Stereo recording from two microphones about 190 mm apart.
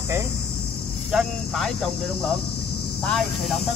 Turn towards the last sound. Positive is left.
turn(degrees=5)  # may be behind; listen again after turning